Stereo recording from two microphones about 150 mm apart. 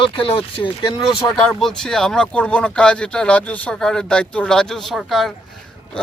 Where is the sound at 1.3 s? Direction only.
5° left (ahead or behind).